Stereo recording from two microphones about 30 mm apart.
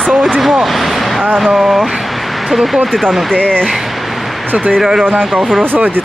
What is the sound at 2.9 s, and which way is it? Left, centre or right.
Speech, centre.